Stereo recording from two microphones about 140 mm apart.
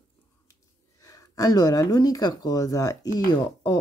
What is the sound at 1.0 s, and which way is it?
Speech, 25° left (ahead or behind).